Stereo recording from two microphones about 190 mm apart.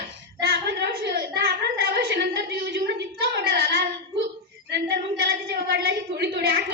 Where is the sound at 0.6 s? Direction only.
60° right (ahead or behind).